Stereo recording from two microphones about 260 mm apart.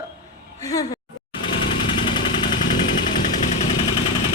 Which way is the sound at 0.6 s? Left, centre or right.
Centre.